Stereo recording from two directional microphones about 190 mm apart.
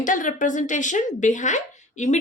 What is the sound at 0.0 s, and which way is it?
A woman's voice, 45° left (ahead or behind).